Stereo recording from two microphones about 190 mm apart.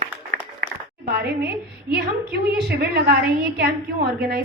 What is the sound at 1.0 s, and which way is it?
A woman's voice, 55° right (ahead or behind).